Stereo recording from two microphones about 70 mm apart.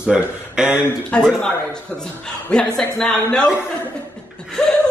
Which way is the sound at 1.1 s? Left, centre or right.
Centre.